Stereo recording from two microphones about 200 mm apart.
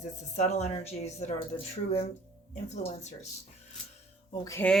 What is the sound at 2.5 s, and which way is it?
Speech, 35° left (ahead or behind).